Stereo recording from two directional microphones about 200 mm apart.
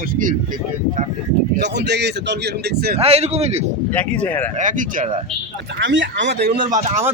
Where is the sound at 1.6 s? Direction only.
60° right (ahead or behind).